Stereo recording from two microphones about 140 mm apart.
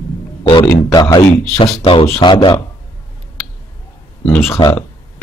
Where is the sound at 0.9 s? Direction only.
30° left (ahead or behind).